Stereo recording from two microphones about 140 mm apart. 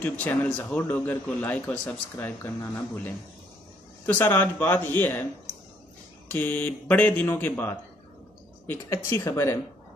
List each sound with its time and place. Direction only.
0.0 s a man's voice: 10° left (ahead or behind)
6.2 s a man's voice: 10° left (ahead or behind)